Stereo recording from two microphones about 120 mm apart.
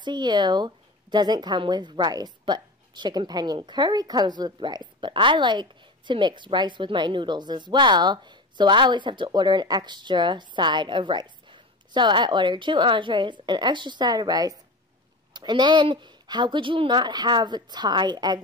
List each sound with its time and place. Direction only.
0.0 s speech: 40° right (ahead or behind)